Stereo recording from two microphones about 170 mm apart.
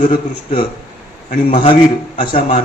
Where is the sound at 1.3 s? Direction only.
50° left (ahead or behind).